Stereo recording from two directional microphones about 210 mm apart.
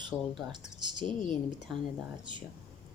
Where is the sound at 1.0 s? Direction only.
35° left (ahead or behind).